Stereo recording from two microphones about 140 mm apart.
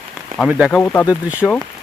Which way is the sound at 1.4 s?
10° left (ahead or behind).